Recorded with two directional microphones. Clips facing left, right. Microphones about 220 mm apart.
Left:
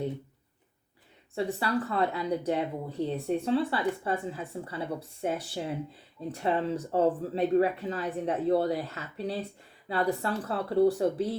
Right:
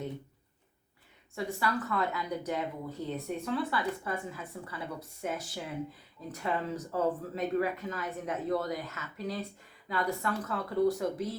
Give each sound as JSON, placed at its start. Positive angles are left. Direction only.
{"t": 1.4, "sound": "a woman's voice", "side_deg": 30}